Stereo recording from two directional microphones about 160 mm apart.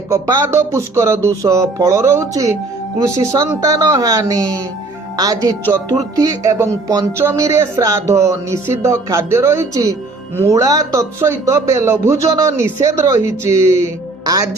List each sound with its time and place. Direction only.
0.1 s speech: 20° right (ahead or behind)